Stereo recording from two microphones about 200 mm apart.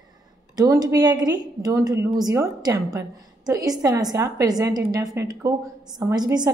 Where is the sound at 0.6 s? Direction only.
15° right (ahead or behind).